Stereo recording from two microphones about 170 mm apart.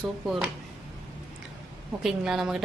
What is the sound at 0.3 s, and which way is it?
Speech, centre (ahead or behind).